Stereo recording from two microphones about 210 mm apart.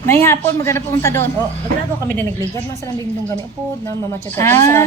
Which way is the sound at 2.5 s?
15° left (ahead or behind).